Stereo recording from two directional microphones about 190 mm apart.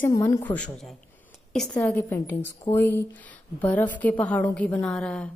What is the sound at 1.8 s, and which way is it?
A woman's voice, 15° left (ahead or behind).